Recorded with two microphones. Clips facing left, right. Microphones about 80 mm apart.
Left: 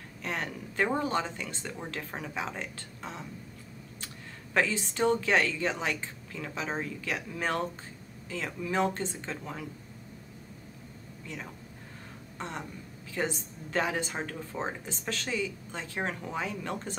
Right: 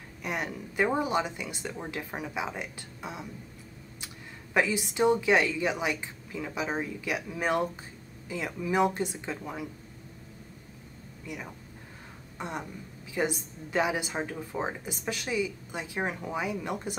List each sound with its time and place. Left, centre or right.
0.2 s a woman's voice: centre
4.6 s a woman's voice: centre
11.2 s a woman's voice: centre